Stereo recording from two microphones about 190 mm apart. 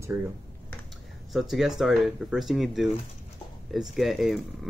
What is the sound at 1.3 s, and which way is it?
Speech, centre (ahead or behind).